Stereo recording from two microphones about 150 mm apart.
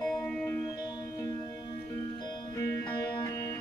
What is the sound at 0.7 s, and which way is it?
Music, 25° left (ahead or behind).